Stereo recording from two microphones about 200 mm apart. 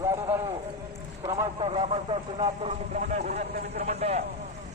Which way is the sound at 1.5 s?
30° right (ahead or behind).